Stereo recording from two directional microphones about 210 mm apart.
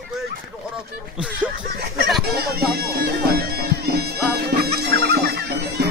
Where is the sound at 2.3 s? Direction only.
50° right (ahead or behind).